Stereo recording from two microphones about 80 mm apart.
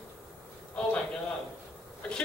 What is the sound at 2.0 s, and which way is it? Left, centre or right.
Speech, centre.